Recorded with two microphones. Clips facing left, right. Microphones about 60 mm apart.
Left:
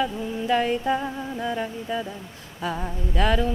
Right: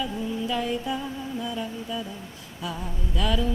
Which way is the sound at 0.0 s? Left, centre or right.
Left.